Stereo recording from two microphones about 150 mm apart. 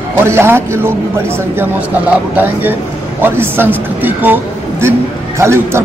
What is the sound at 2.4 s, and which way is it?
Speech, 15° right (ahead or behind).